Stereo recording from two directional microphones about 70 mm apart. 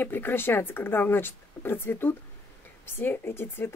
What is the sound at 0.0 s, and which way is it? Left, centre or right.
Speech, left.